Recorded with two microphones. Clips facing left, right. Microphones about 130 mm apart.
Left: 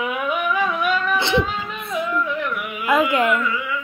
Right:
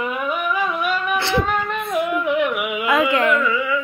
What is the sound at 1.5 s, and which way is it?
Music, 55° right (ahead or behind).